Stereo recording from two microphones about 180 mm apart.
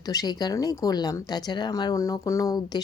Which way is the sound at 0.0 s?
20° left (ahead or behind).